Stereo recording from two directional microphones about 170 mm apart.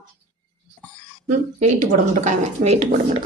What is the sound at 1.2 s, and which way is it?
Speech, 45° right (ahead or behind).